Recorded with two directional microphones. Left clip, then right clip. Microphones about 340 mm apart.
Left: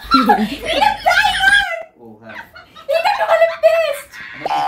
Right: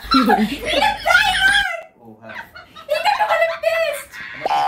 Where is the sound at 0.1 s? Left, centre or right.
Centre.